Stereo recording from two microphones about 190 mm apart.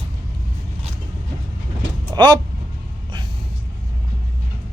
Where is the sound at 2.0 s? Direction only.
20° right (ahead or behind).